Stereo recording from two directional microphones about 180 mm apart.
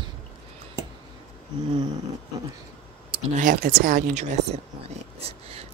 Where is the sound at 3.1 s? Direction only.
45° right (ahead or behind).